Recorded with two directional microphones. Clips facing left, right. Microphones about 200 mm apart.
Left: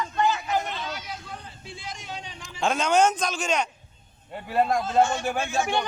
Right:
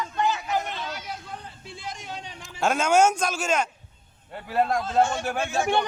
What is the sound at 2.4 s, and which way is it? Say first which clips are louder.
A man's voice: right 1 dB; 5° right (ahead or behind).